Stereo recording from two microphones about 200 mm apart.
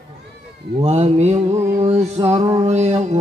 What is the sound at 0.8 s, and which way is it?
Mantra, 35° right (ahead or behind).